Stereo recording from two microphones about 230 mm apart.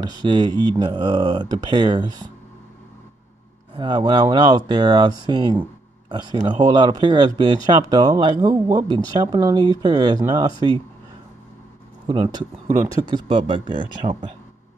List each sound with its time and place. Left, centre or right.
0.0 s speech: centre
3.7 s speech: centre
12.1 s speech: centre